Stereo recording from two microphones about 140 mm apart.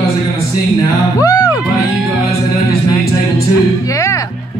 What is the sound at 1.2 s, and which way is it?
Music, 25° left (ahead or behind).